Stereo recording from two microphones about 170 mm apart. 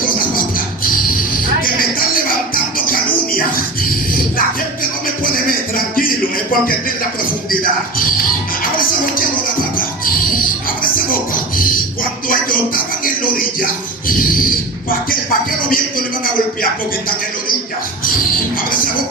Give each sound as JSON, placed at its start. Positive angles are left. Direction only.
{"t": 0.0, "sound": "music", "side_deg": 55}
{"t": 1.6, "sound": "music", "side_deg": 55}
{"t": 12.3, "sound": "music", "side_deg": 55}
{"t": 14.1, "sound": "a sound", "side_deg": 55}
{"t": 14.8, "sound": "music", "side_deg": 55}